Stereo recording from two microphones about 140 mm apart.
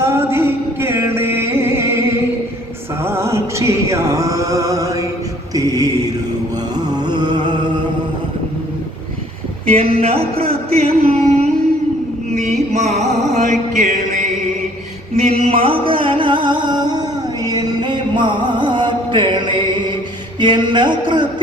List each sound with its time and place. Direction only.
0.0 s music: 20° right (ahead or behind)
5.5 s mantra: 25° right (ahead or behind)
6.7 s a sound: 30° right (ahead or behind)
9.6 s speech: 45° right (ahead or behind)
12.3 s music: 55° right (ahead or behind)
15.1 s music: 50° right (ahead or behind); by 20.0 s 35° right (ahead or behind)
20.4 s a sound: 35° right (ahead or behind)